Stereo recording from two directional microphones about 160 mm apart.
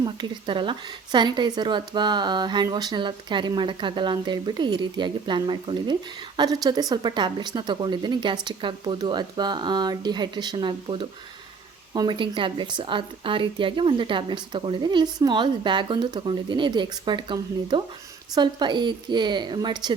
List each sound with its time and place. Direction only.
0.0 s speech: 30° right (ahead or behind)